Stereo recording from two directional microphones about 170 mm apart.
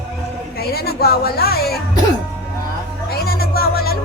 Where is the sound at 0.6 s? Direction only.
65° left (ahead or behind).